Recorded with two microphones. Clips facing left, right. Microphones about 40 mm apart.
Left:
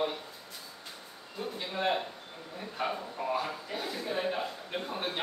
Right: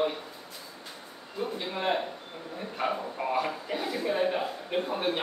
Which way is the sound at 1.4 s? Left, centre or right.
Centre.